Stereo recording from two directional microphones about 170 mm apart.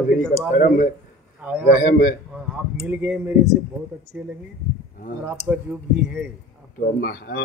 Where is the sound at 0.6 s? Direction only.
50° left (ahead or behind).